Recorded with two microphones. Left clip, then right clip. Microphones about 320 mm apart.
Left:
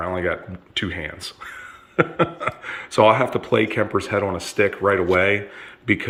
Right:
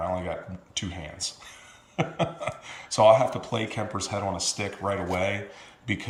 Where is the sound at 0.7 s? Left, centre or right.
Centre.